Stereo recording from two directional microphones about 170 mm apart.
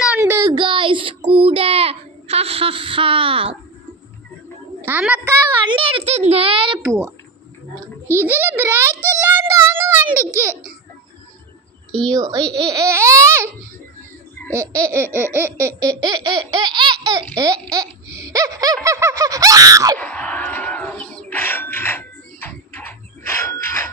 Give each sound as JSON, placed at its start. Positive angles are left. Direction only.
{"t": 0.2, "sound": "a sound", "side_deg": -15}
{"t": 0.5, "sound": "child singing", "side_deg": -30}
{"t": 4.9, "sound": "baby laughter", "side_deg": -10}
{"t": 5.6, "sound": "a sound", "side_deg": -30}
{"t": 6.1, "sound": "a child's voice", "side_deg": -40}
{"t": 6.8, "sound": "baby laughter", "side_deg": -15}
{"t": 8.0, "sound": "a child's voice", "side_deg": 15}
{"t": 8.3, "sound": "baby laughter", "side_deg": -10}
{"t": 11.9, "sound": "a woman's voice", "side_deg": 5}
{"t": 12.1, "sound": "baby laughter", "side_deg": -20}
{"t": 14.3, "sound": "laughter", "side_deg": 10}
{"t": 14.8, "sound": "baby laughter", "side_deg": -15}
{"t": 20.0, "sound": "a sound", "side_deg": 10}